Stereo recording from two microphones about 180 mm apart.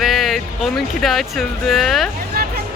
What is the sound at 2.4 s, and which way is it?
Hubbub, 60° right (ahead or behind).